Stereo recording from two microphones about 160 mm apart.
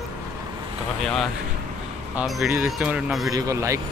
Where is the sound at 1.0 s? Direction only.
Centre (ahead or behind).